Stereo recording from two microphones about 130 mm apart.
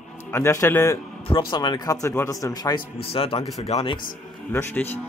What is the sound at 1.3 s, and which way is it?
A man's voice, 35° left (ahead or behind).